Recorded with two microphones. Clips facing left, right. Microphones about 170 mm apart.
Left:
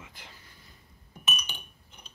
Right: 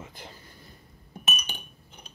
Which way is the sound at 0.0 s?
40° right (ahead or behind).